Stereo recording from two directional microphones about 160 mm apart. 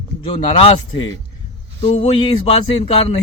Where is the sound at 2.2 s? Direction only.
35° left (ahead or behind).